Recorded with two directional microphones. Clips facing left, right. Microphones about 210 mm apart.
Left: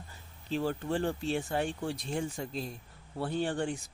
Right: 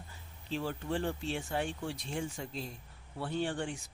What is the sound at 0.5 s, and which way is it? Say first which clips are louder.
Speech: left 4 dB; 40° left (ahead or behind).